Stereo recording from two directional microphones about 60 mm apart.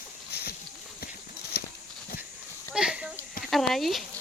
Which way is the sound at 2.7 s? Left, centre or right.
Centre.